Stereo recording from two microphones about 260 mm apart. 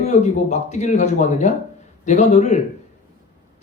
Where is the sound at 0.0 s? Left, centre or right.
Left.